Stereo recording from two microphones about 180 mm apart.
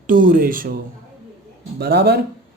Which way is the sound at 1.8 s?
65° right (ahead or behind).